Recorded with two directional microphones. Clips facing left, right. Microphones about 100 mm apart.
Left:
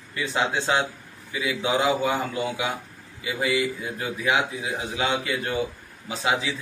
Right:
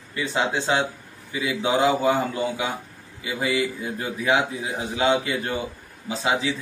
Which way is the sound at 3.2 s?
30° right (ahead or behind).